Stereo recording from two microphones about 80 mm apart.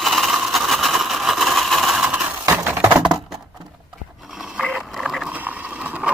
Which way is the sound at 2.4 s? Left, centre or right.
Right.